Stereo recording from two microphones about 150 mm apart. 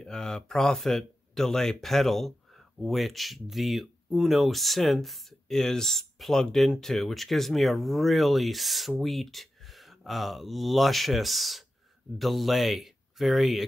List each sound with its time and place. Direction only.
0.0 s speech: 5° left (ahead or behind)